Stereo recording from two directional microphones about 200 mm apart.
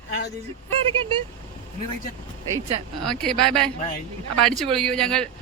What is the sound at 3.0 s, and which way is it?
Speech, 5° left (ahead or behind).